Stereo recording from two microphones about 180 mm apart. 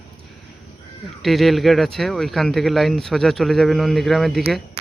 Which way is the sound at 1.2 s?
Centre (ahead or behind).